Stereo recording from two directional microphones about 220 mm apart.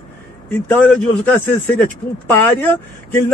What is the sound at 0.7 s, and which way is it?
Speech, 5° left (ahead or behind).